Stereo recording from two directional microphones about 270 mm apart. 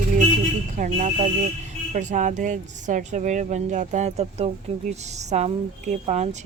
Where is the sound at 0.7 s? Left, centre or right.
Right.